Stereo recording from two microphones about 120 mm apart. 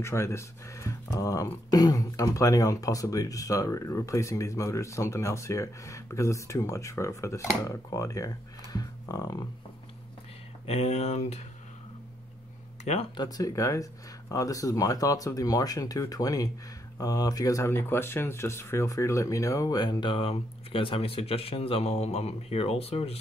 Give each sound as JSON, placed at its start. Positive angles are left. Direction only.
{"t": 0.0, "sound": "speech", "side_deg": 25}
{"t": 10.7, "sound": "speech", "side_deg": 65}
{"t": 13.1, "sound": "speech", "side_deg": 35}